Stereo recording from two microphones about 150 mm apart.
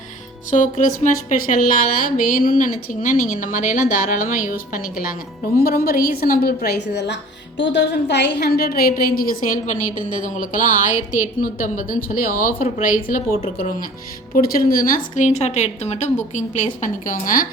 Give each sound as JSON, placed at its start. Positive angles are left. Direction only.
{"t": 0.5, "sound": "a woman's voice", "side_deg": 60}
{"t": 8.4, "sound": "a woman's voice", "side_deg": 90}
{"t": 16.8, "sound": "a woman's voice", "side_deg": 65}